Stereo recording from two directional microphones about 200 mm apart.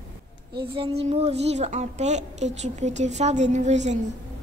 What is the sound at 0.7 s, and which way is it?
Speech, 25° right (ahead or behind).